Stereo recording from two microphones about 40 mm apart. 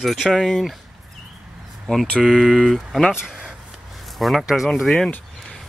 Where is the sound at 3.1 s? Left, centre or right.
Centre.